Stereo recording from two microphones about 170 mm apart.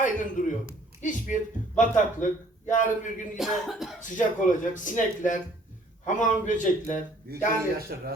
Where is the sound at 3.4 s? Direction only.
Centre (ahead or behind).